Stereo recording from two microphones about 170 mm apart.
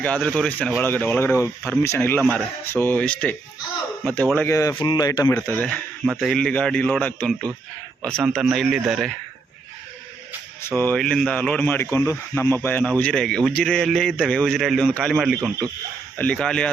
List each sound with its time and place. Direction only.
0.0 s speech: 5° left (ahead or behind); by 5.3 s 20° left (ahead or behind)
5.3 s speech: 10° left (ahead or behind)
8.2 s speech: 5° right (ahead or behind)
10.6 s speech: 10° left (ahead or behind)